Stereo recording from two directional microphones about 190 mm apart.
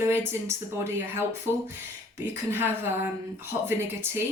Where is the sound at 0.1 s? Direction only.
15° right (ahead or behind).